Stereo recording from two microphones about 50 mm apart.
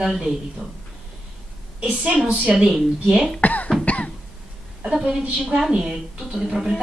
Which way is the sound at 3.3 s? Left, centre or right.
Left.